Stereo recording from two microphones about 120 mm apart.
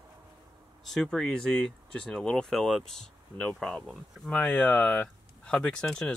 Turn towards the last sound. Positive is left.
turn(degrees=5)  # may be behind; listen again after turning